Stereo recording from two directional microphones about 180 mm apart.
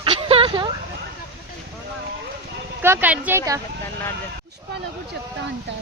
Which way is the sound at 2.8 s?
10° right (ahead or behind).